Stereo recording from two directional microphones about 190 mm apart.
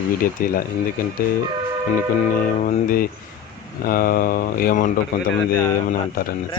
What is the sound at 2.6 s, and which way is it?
Speech, 50° left (ahead or behind).